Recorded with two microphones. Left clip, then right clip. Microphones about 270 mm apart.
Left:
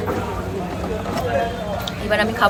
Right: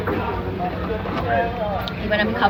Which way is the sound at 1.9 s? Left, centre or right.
Centre.